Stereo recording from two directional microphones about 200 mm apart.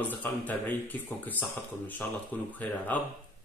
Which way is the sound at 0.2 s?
10° left (ahead or behind).